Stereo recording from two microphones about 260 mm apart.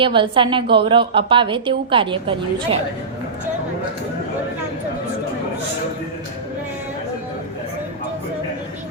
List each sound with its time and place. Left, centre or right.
0.0 s a woman's voice: centre